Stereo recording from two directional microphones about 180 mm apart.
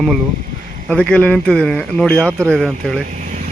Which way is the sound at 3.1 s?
45° right (ahead or behind).